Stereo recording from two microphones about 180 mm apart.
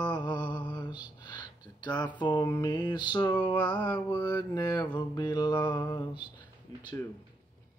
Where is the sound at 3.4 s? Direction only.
25° left (ahead or behind).